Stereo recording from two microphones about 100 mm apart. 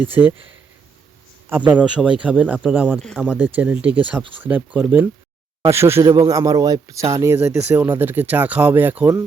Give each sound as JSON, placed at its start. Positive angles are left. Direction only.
{"t": 0.0, "sound": "speech", "side_deg": -20}
{"t": 1.5, "sound": "speech", "side_deg": -20}
{"t": 6.1, "sound": "a man's voice", "side_deg": -35}